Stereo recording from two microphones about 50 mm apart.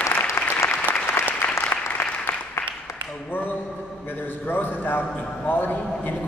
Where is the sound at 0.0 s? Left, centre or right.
Left.